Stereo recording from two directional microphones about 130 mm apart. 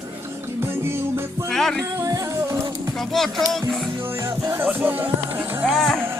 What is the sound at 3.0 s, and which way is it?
Speech, centre (ahead or behind).